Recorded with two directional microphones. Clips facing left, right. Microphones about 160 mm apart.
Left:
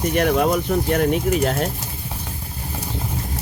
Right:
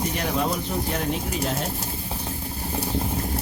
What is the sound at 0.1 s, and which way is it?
Speech, 60° left (ahead or behind).